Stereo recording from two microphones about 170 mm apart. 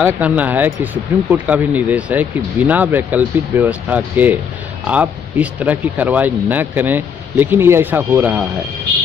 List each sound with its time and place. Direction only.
0.0 s speech: 10° right (ahead or behind)